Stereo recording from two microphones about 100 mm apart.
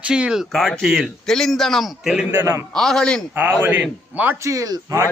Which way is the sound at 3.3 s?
15° right (ahead or behind).